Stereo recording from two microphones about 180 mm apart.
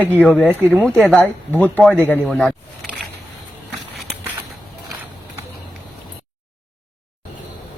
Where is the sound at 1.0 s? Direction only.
5° left (ahead or behind).